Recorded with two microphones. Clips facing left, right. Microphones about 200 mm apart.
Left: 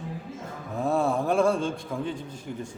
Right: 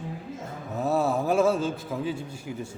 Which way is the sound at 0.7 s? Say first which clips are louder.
Even; 5° right (ahead or behind).